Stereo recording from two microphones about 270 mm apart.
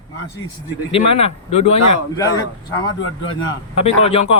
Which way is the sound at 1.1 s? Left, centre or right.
Left.